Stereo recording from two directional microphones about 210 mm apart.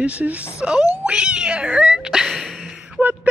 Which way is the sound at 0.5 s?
5° right (ahead or behind).